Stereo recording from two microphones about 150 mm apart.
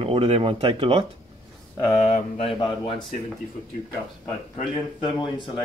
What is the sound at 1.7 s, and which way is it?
Speech, 25° left (ahead or behind).